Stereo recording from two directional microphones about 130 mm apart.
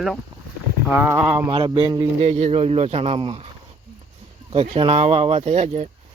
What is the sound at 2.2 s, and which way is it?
Speech, 50° right (ahead or behind).